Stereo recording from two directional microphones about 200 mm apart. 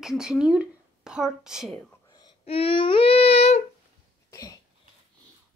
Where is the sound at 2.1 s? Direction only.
20° left (ahead or behind).